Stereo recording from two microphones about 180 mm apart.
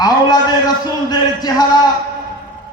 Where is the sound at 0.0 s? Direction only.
20° left (ahead or behind).